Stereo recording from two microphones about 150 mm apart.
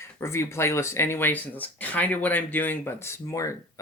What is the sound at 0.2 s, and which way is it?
Speech, 15° left (ahead or behind).